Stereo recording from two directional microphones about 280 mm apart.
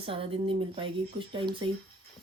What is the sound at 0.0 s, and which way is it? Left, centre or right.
Speech, centre.